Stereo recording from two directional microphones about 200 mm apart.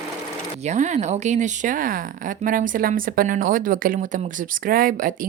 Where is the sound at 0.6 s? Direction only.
35° right (ahead or behind).